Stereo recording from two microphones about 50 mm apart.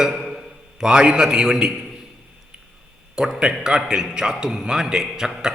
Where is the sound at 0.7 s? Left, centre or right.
Centre.